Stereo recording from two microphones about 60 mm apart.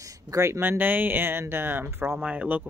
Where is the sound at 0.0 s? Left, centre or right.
Right.